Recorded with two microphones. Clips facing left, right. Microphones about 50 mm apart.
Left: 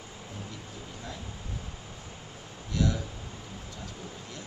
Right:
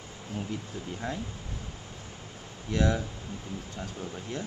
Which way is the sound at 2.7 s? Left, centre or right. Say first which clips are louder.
Right 3 dB; right.